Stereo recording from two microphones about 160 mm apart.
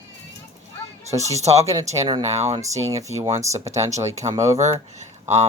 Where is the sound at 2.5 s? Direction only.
20° right (ahead or behind).